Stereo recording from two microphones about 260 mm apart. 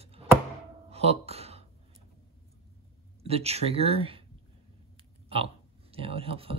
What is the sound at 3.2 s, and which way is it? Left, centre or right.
Speech, right.